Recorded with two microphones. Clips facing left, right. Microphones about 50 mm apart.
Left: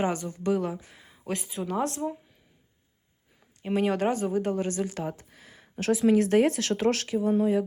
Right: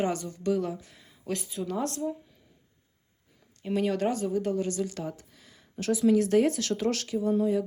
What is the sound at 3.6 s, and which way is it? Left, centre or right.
Speech, left.